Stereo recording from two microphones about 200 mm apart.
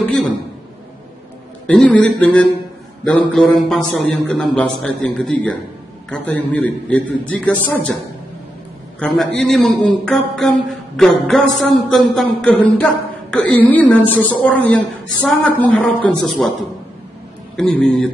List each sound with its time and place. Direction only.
0.0 s a sound: 5° left (ahead or behind)
1.7 s speech: 5° left (ahead or behind)
9.0 s a man's voice: 5° left (ahead or behind)